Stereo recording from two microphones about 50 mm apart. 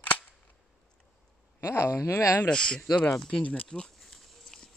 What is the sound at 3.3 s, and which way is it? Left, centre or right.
Speech, left.